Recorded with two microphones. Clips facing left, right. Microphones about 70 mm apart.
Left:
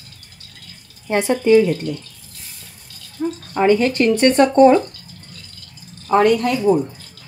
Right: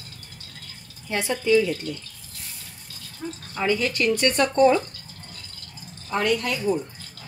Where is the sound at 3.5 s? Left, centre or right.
Left.